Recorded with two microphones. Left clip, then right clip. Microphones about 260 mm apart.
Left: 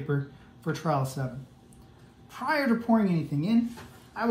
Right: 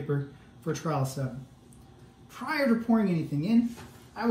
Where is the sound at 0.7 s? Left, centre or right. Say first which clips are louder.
Left 2 dB; left.